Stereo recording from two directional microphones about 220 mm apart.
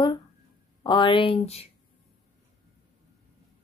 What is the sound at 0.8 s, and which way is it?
Speech, 20° left (ahead or behind).